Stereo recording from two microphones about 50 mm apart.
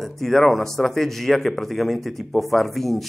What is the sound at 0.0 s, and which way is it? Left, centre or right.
A man's voice, centre.